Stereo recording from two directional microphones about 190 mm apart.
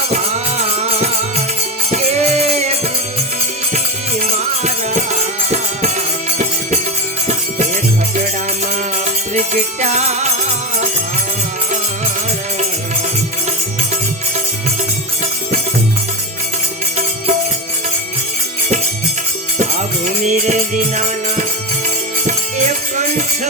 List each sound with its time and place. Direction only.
0.1 s music: 35° right (ahead or behind)
4.2 s music: 35° right (ahead or behind)
9.0 s music: 40° right (ahead or behind)
20.1 s music: 40° right (ahead or behind)